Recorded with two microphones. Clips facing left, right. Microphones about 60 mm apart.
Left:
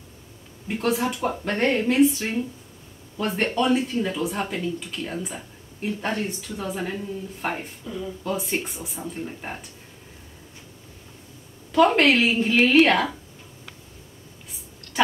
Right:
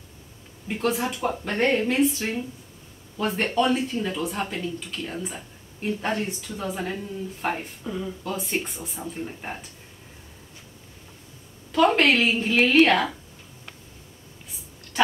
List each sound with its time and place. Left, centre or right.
0.7 s speech: centre
7.8 s speech: right
8.3 s speech: centre
11.7 s speech: centre